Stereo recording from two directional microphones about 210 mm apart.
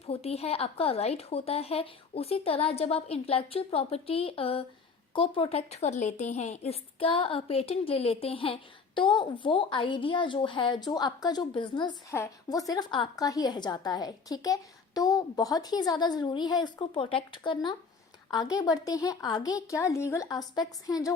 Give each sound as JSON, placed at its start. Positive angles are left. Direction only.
{"t": 0.0, "sound": "a woman's voice", "side_deg": 30}